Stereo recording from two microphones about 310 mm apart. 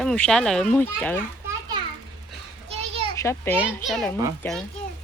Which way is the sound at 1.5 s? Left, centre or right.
Centre.